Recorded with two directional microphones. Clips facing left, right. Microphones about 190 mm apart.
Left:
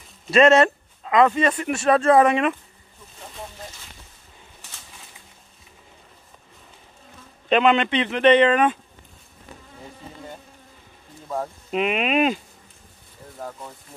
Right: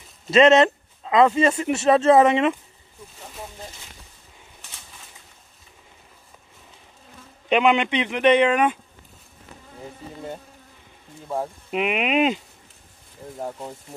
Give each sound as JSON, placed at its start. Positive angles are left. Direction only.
{"t": 0.3, "sound": "a man's voice", "side_deg": -20}
{"t": 7.4, "sound": "speech", "side_deg": -15}
{"t": 11.2, "sound": "speech", "side_deg": -15}
{"t": 13.4, "sound": "a man's voice", "side_deg": -25}